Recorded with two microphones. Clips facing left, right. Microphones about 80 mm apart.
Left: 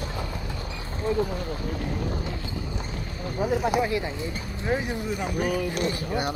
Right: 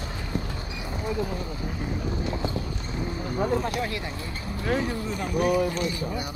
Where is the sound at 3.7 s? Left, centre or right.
Centre.